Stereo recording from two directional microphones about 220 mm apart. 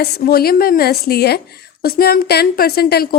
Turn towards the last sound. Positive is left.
turn(degrees=45)  # may be behind; listen again after turning